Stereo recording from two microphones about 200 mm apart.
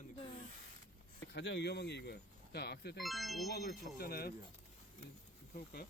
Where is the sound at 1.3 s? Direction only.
60° left (ahead or behind).